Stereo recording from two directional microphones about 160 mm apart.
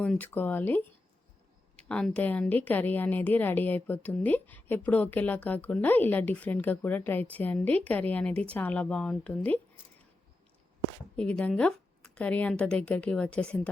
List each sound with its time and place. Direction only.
0.0 s a woman's voice: 10° left (ahead or behind)
11.2 s a woman's voice: 5° left (ahead or behind)